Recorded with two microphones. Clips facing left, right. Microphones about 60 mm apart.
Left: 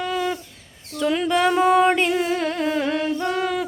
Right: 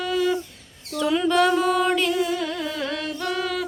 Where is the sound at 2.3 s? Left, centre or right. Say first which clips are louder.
Left 4 dB; left.